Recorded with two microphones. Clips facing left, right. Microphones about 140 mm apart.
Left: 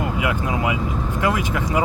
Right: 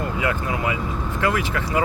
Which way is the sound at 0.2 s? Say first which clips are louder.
Even; 15° left (ahead or behind).